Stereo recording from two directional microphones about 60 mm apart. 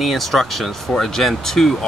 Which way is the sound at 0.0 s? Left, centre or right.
Centre.